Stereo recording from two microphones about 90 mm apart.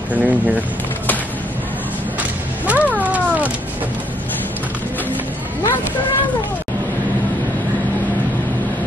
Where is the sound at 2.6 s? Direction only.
15° right (ahead or behind).